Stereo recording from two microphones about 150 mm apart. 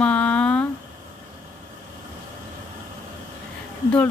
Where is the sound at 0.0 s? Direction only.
10° left (ahead or behind).